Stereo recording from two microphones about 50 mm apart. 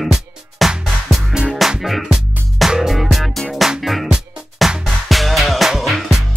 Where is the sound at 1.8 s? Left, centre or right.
Centre.